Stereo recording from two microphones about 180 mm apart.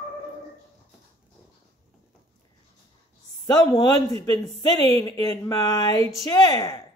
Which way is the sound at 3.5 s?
25° left (ahead or behind).